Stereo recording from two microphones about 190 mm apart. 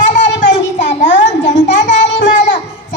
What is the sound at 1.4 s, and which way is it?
Child singing, 70° left (ahead or behind).